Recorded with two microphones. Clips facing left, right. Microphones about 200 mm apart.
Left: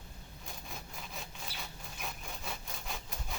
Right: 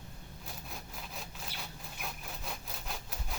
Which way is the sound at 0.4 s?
Centre (ahead or behind).